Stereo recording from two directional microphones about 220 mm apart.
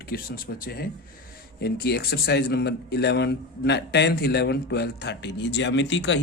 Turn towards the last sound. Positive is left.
turn(degrees=55)  # may be behind; listen again after turning